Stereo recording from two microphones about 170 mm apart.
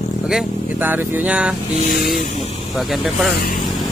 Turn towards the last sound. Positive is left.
turn(degrees=0)  # may be behind; listen again after turning